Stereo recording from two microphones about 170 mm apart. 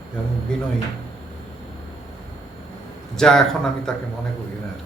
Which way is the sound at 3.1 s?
5° left (ahead or behind).